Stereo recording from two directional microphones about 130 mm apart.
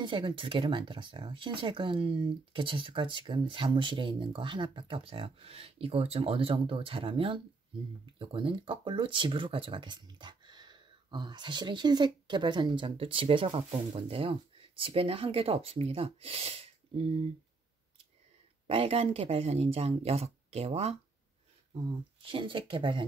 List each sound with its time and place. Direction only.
0.0 s speech: 35° right (ahead or behind)
18.7 s speech: 45° right (ahead or behind)
22.2 s speech: 40° right (ahead or behind)